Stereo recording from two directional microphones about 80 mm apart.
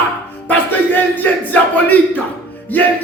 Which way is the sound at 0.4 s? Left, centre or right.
Left.